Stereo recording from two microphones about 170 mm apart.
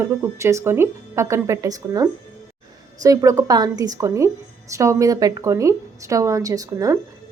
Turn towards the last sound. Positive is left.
turn(degrees=-20)  # may be behind; listen again after turning